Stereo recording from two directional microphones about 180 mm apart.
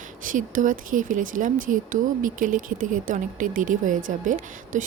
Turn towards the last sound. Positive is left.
turn(degrees=-45)  # may be behind; listen again after turning